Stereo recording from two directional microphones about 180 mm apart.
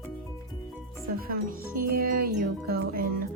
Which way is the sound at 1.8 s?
55° right (ahead or behind).